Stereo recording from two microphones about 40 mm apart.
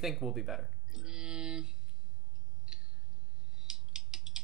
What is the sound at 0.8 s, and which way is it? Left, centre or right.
Music, centre.